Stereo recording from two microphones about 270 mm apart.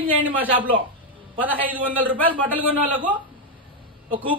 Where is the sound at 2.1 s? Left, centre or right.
Centre.